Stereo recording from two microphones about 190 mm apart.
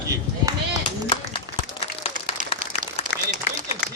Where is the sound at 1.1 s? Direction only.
30° left (ahead or behind).